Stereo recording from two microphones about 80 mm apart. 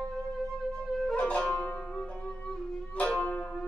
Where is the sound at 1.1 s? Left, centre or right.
Centre.